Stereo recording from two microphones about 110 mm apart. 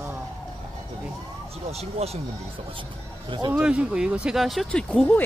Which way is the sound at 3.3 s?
45° right (ahead or behind).